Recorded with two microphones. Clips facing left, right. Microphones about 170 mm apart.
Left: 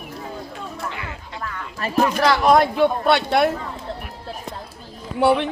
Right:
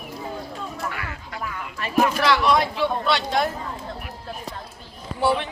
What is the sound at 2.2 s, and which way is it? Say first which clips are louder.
A man's voice: left 4 dB; 45° left (ahead or behind).